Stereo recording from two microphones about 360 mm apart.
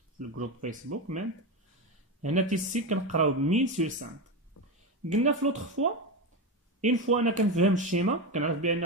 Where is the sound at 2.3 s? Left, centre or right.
Centre.